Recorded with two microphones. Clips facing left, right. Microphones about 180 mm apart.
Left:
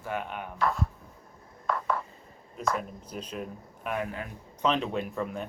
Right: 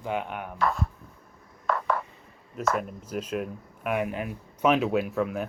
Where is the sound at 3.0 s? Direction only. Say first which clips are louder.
Right 6 dB; 10° right (ahead or behind).